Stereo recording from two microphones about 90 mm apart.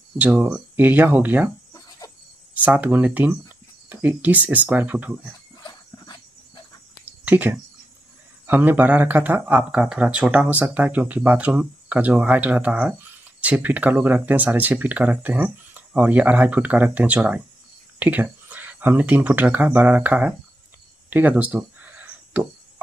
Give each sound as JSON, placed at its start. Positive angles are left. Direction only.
{"t": 0.2, "sound": "speech", "side_deg": -15}
{"t": 1.7, "sound": "insect", "side_deg": 40}
{"t": 2.5, "sound": "speech", "side_deg": -15}
{"t": 5.6, "sound": "horse", "side_deg": 55}
{"t": 7.1, "sound": "a sound", "side_deg": -20}
{"t": 8.5, "sound": "speech", "side_deg": -20}
{"t": 21.1, "sound": "a sound", "side_deg": -20}